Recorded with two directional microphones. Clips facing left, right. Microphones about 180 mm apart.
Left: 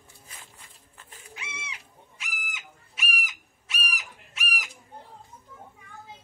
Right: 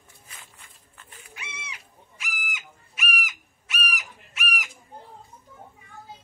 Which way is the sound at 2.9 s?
30° left (ahead or behind).